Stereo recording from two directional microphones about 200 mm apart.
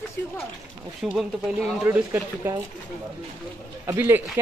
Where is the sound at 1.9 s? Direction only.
15° right (ahead or behind).